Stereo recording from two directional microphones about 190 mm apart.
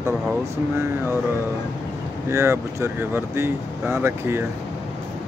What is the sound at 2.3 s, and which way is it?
Speech, 15° right (ahead or behind).